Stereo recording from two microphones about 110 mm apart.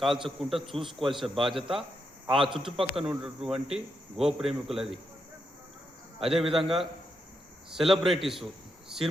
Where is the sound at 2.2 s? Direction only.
50° right (ahead or behind).